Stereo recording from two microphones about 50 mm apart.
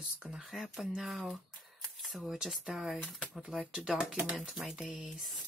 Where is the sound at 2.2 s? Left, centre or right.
Centre.